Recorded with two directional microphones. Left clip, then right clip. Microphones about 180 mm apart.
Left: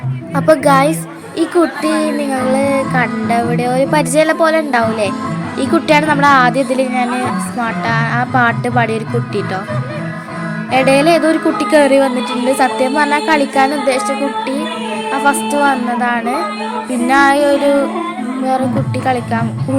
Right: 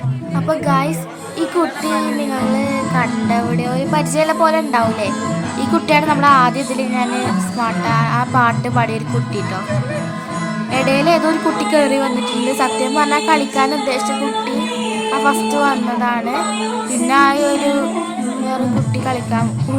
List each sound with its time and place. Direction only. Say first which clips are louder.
0.4 s speech: left 7 dB; 25° left (ahead or behind)
1.8 s music: left 3 dB; 15° left (ahead or behind)
10.7 s music: left 4 dB; 10° left (ahead or behind)
15.1 s music: left 2 dB; 10° left (ahead or behind)
19.0 s music: left 4 dB; 10° left (ahead or behind)